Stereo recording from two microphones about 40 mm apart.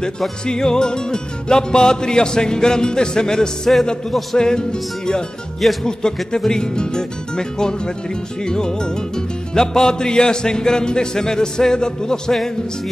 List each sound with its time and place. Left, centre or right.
0.5 s music: centre
5.6 s speech: centre
6.3 s music: centre